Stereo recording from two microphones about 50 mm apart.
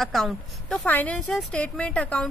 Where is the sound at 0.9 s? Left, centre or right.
Left.